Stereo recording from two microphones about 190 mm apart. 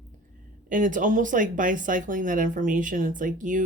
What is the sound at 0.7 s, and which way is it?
Speech, 45° right (ahead or behind).